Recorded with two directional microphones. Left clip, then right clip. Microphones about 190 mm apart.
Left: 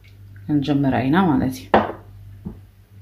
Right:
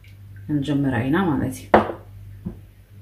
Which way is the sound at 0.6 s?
45° left (ahead or behind).